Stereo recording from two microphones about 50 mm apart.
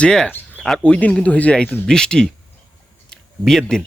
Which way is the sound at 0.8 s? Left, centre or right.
Left.